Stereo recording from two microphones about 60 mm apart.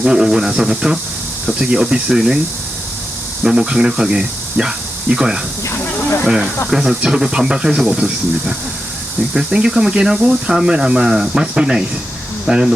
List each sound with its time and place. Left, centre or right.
0.0 s speech: centre
3.4 s speech: centre
5.7 s a sound: left
6.2 s speech: centre